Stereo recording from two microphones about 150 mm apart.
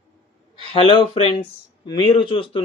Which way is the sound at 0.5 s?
40° left (ahead or behind).